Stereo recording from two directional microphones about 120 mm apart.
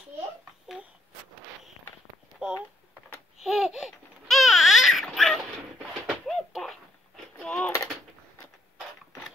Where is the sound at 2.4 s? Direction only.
5° right (ahead or behind).